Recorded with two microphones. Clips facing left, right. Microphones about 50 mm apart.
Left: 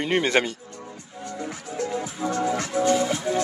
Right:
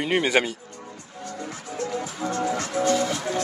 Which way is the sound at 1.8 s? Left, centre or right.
Centre.